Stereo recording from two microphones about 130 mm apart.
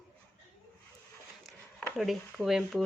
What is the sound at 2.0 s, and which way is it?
Speech, centre (ahead or behind).